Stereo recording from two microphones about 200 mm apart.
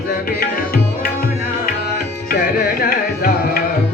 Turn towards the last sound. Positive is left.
turn(degrees=50)  # may be behind; listen again after turning